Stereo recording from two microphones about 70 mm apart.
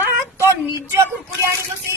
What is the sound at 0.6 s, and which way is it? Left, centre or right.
Speech, right.